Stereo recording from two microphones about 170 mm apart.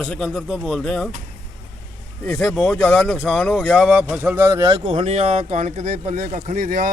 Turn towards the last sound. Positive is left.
turn(degrees=-55)  # may be behind; listen again after turning